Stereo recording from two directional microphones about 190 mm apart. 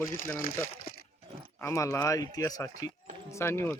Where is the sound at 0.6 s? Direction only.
50° left (ahead or behind).